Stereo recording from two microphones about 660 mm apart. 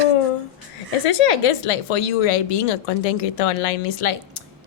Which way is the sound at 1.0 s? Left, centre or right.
Left.